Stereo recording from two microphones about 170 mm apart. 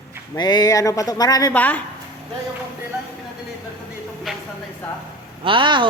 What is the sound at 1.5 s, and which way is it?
Speech, 10° left (ahead or behind).